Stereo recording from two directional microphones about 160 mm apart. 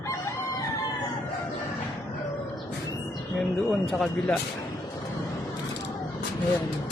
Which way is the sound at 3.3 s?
5° left (ahead or behind).